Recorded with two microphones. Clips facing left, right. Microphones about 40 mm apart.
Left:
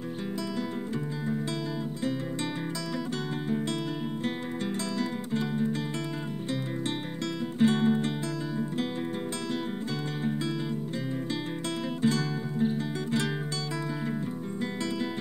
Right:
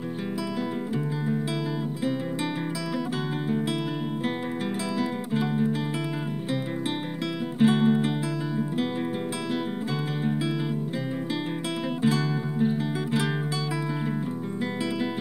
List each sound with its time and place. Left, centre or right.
4.9 s music: centre
7.5 s music: centre
12.0 s music: centre